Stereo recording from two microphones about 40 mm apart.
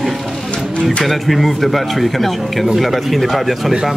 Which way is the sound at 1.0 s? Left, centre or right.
Centre.